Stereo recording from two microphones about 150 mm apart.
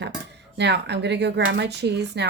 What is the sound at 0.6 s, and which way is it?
Speech, 90° right.